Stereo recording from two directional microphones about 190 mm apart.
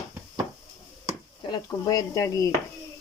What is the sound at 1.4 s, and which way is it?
Speech, 20° left (ahead or behind).